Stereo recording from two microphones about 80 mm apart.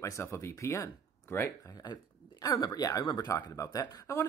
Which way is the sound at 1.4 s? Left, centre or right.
Left.